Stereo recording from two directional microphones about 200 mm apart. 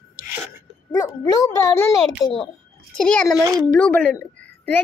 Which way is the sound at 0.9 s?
15° left (ahead or behind).